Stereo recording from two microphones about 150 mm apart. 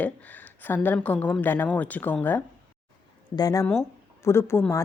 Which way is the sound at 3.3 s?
25° left (ahead or behind).